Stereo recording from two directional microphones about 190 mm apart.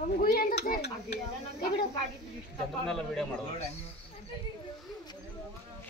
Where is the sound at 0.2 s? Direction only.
50° left (ahead or behind).